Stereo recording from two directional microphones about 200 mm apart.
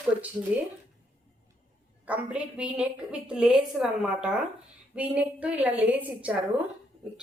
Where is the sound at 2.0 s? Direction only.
5° right (ahead or behind).